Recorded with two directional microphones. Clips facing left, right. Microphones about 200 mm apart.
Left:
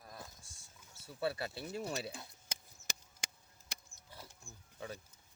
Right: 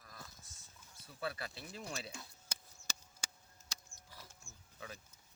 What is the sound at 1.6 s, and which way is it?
Speech, 55° left (ahead or behind).